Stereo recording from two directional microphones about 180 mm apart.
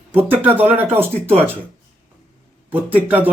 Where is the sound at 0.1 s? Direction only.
10° right (ahead or behind).